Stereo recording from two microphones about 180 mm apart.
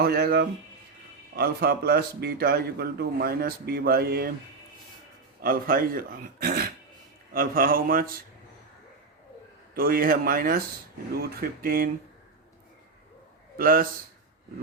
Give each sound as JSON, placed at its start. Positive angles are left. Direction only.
{"t": 0.0, "sound": "speech", "side_deg": -55}
{"t": 5.4, "sound": "speech", "side_deg": -55}
{"t": 9.7, "sound": "speech", "side_deg": -55}
{"t": 13.6, "sound": "speech", "side_deg": -55}